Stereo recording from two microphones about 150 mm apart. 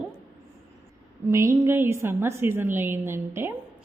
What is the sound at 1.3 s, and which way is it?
A woman's voice, 20° right (ahead or behind).